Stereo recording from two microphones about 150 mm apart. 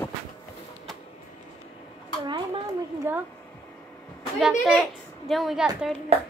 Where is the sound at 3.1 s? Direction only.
15° right (ahead or behind).